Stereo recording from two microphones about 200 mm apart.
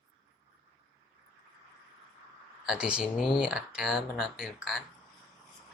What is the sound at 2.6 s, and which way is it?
Speech, 5° right (ahead or behind).